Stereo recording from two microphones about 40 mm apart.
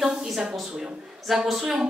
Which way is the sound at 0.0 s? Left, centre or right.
Centre.